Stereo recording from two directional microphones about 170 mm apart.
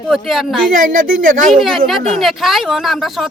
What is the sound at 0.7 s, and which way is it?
Speech, 55° right (ahead or behind).